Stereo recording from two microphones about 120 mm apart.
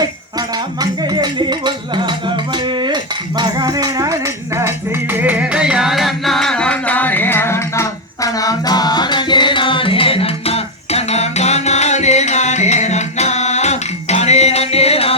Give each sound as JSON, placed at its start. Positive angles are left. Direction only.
{"t": 0.0, "sound": "rattle", "side_deg": -35}